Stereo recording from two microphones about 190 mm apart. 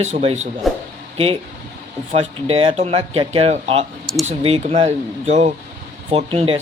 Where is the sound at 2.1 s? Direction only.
30° right (ahead or behind).